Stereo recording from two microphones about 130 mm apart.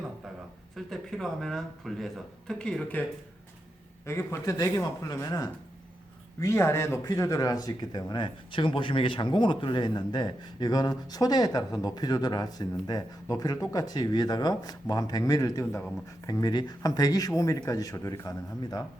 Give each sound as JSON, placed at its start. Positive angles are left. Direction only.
{"t": 0.9, "sound": "speech", "side_deg": 0}
{"t": 4.0, "sound": "speech", "side_deg": 20}